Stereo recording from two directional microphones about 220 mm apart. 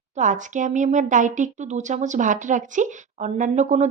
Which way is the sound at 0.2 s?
35° right (ahead or behind).